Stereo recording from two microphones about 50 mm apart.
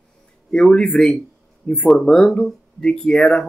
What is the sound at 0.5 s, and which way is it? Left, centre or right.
Speech, centre.